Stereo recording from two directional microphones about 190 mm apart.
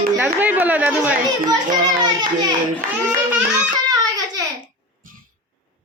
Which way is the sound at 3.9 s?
20° right (ahead or behind).